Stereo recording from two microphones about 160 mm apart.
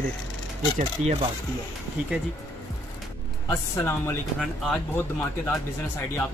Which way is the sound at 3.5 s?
15° left (ahead or behind).